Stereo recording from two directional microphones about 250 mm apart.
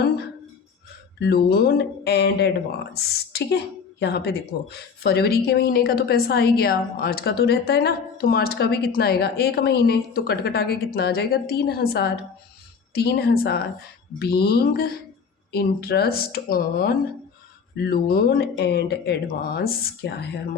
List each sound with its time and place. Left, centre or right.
1.2 s a woman's voice: left